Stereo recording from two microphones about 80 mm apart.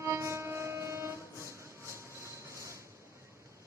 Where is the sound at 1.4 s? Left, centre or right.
Right.